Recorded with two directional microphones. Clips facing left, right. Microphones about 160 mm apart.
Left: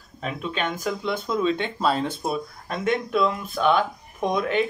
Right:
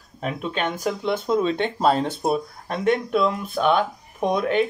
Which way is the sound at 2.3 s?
35° right (ahead or behind).